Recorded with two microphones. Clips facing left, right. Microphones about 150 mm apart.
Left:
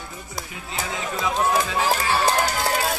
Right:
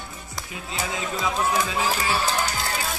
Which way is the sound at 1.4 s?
35° left (ahead or behind).